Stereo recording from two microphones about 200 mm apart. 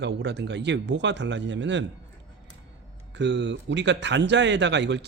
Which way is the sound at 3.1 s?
60° right (ahead or behind).